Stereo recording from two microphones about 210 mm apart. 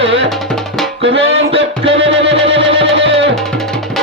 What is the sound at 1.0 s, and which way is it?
Music, 25° right (ahead or behind).